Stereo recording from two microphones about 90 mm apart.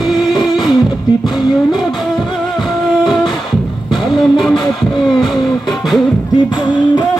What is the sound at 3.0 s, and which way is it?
Music, centre (ahead or behind).